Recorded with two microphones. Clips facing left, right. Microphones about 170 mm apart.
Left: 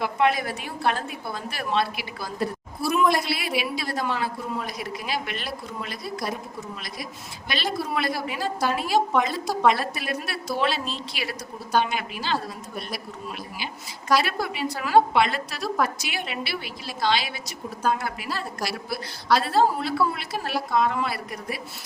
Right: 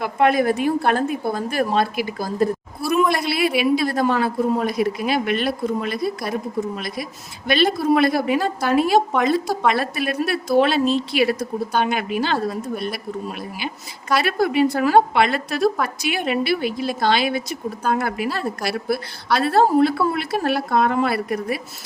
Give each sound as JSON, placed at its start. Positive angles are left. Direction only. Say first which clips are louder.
{"t": 0.0, "sound": "a woman's voice", "louder": "right 6 dB", "side_deg": -50}
{"t": 3.1, "sound": "a man's voice", "louder": "right 5 dB", "side_deg": -60}
{"t": 14.2, "sound": "a man's voice", "louder": "right 9 dB", "side_deg": -55}